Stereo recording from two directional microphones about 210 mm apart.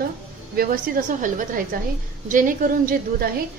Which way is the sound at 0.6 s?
40° right (ahead or behind).